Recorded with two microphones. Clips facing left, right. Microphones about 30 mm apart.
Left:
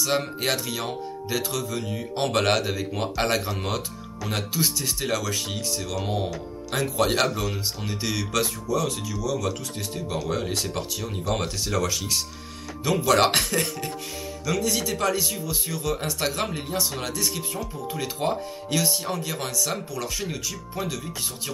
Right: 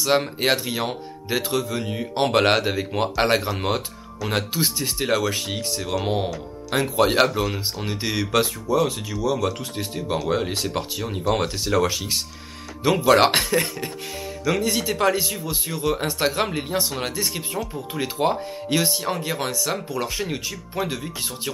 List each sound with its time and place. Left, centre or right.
0.0 s speech: right
14.4 s speech: right
19.9 s speech: right